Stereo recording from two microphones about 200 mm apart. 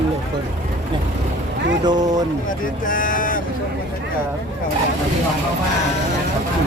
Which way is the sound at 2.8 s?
40° left (ahead or behind).